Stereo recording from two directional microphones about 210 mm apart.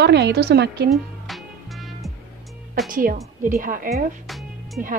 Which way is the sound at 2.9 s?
40° right (ahead or behind).